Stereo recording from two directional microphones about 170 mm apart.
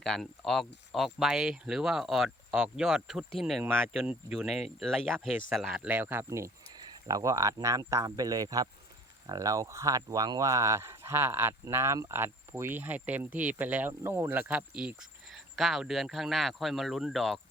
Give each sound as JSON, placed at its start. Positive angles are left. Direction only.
{"t": 0.0, "sound": "speech", "side_deg": 0}